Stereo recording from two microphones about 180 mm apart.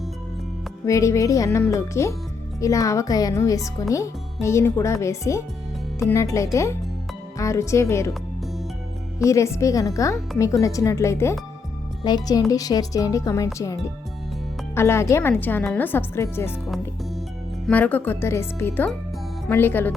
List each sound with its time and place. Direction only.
0.9 s speech: 15° left (ahead or behind)
9.1 s speech: 15° left (ahead or behind)
17.7 s speech: 10° left (ahead or behind)